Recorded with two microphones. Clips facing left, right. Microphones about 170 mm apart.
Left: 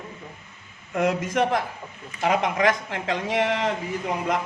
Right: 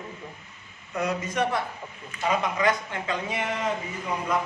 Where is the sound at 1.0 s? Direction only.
90° left.